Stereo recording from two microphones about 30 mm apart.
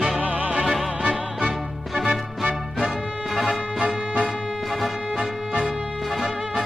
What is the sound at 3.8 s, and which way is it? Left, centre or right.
Music, right.